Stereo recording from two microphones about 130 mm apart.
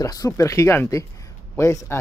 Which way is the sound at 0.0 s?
25° left (ahead or behind).